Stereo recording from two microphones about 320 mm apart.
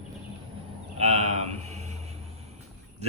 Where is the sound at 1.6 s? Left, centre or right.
Right.